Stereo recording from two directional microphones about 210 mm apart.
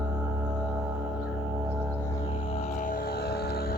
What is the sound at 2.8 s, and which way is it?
Vehicle, 45° left (ahead or behind).